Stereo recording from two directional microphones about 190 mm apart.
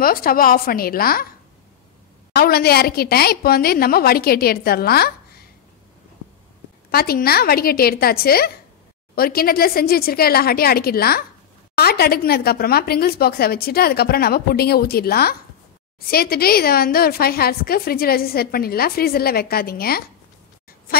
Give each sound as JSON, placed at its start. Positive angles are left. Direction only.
{"t": 0.0, "sound": "a woman's voice", "side_deg": 50}
{"t": 2.3, "sound": "a woman's voice", "side_deg": 55}
{"t": 6.9, "sound": "a woman's voice", "side_deg": 55}